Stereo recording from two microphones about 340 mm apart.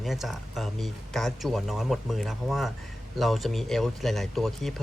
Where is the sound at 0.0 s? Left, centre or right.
Centre.